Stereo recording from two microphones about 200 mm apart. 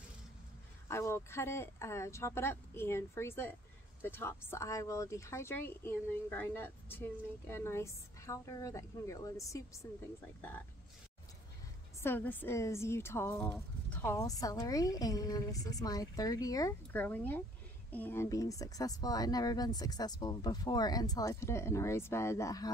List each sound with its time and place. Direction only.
0.8 s speech: 15° left (ahead or behind)
12.0 s speech: 10° left (ahead or behind)